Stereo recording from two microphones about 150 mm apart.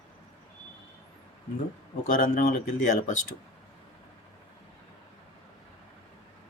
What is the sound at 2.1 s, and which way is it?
Speech, 70° left (ahead or behind).